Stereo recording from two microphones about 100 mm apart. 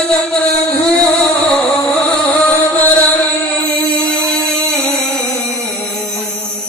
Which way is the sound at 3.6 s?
15° left (ahead or behind).